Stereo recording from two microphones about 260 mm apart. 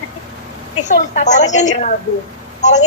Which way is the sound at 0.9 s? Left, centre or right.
Left.